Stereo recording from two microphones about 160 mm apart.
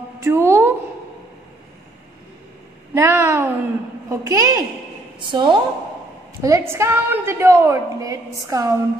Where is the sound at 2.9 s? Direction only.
15° right (ahead or behind).